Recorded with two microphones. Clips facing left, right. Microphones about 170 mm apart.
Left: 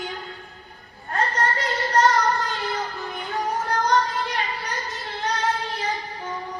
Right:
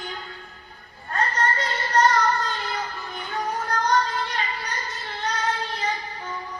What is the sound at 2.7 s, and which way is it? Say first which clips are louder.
Music: left 3 dB; 20° left (ahead or behind).